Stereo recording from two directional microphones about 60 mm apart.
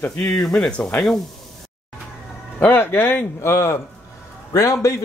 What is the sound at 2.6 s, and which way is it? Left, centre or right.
Speech, left.